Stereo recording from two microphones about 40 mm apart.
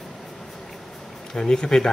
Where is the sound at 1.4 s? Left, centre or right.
Centre.